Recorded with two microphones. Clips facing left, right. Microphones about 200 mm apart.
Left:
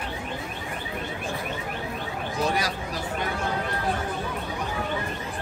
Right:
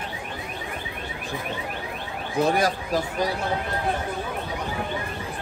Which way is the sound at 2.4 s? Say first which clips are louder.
Right 5 dB; 50° right (ahead or behind).